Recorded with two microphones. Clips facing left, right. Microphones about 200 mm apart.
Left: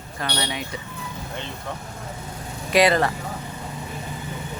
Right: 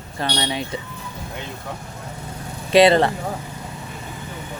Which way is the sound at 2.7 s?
25° right (ahead or behind).